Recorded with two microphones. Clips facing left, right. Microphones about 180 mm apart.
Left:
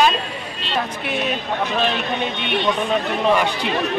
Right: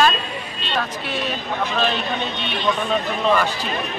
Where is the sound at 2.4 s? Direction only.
60° left (ahead or behind).